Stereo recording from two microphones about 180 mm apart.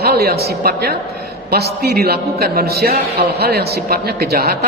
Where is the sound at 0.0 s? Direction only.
60° right (ahead or behind).